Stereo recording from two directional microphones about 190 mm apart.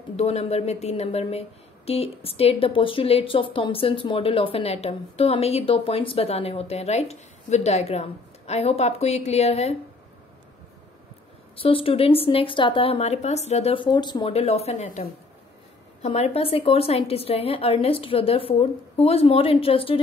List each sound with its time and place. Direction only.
0.1 s speech: 35° left (ahead or behind)
11.5 s speech: 30° left (ahead or behind)